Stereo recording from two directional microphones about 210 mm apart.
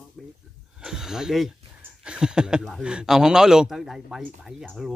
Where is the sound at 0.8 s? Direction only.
5° right (ahead or behind).